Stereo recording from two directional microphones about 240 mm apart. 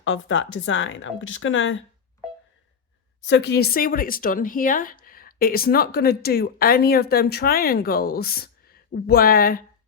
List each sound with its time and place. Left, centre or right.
0.0 s a woman's voice: left
3.2 s a woman's voice: left